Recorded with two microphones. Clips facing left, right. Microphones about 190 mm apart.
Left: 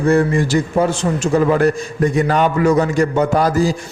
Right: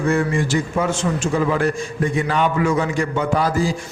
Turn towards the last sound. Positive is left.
turn(degrees=40)  # may be behind; listen again after turning